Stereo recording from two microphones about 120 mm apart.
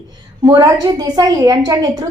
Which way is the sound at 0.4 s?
30° right (ahead or behind).